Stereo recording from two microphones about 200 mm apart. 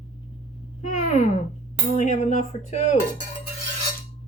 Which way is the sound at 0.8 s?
35° left (ahead or behind).